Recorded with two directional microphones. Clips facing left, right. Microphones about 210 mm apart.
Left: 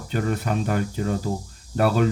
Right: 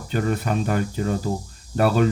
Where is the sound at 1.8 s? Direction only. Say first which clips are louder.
Right 1 dB; 35° right (ahead or behind).